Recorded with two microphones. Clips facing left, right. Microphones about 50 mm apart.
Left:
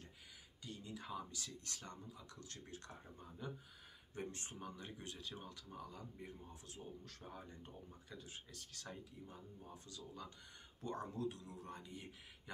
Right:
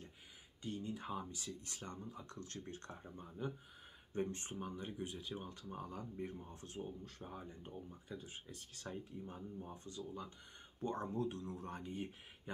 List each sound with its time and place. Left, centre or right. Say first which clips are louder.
0.6 s speech: right 7 dB; right
2.0 s speech: right 5 dB; right; by 5.5 s centre
5.5 s speech: right 5 dB; right
7.2 s speech: right 2 dB; centre; by 12.1 s right